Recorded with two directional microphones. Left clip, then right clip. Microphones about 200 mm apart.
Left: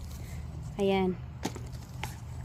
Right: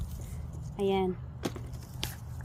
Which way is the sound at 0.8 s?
60° left (ahead or behind).